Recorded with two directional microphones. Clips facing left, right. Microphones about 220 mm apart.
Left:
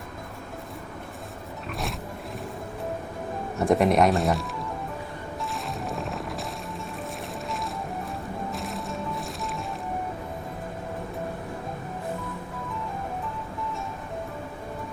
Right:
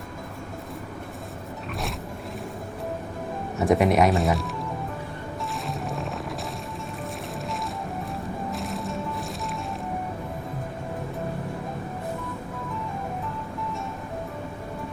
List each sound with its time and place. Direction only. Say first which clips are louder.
3.6 s speech: even; centre (ahead or behind)
5.6 s music: right 1 dB; centre (ahead or behind)
8.5 s music: right 2 dB; centre (ahead or behind)